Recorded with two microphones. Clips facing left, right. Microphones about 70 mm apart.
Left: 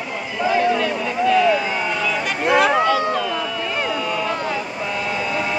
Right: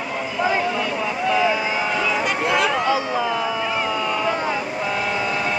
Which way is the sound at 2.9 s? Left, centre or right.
Centre.